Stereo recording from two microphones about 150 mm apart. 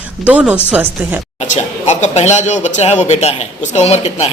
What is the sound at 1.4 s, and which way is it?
Speech, 50° left (ahead or behind).